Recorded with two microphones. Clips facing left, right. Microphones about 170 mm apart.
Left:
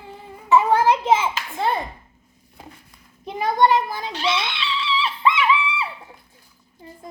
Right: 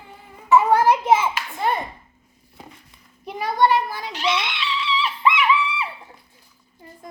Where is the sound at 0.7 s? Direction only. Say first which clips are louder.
Right 1 dB; 25° left (ahead or behind).